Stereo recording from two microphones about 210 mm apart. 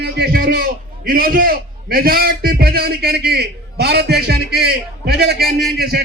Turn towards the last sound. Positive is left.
turn(degrees=-50)  # may be behind; listen again after turning